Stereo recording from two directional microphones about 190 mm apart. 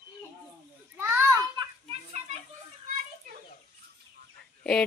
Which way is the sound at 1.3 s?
20° right (ahead or behind).